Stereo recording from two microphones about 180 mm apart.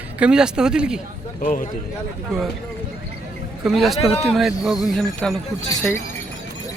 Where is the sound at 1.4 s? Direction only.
50° left (ahead or behind).